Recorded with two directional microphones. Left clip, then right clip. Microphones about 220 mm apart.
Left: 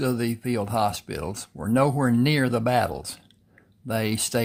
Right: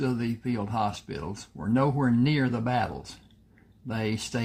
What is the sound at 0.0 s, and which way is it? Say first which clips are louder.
Speech: left 4 dB; 40° left (ahead or behind).